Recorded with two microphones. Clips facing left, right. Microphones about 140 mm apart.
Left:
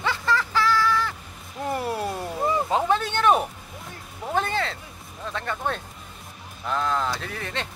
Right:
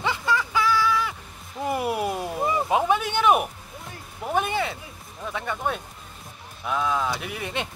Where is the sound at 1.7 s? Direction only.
15° right (ahead or behind).